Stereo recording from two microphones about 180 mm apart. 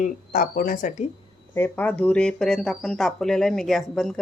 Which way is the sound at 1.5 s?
15° left (ahead or behind).